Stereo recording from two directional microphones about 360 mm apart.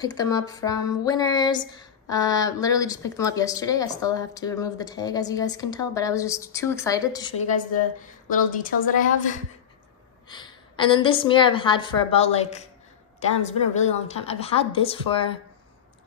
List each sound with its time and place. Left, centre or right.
0.0 s speech: centre
8.3 s a woman's voice: left